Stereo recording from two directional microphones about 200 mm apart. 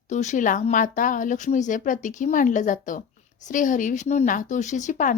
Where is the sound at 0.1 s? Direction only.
35° left (ahead or behind).